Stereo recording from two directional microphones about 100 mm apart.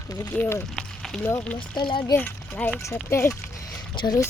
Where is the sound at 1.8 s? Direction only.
55° left (ahead or behind).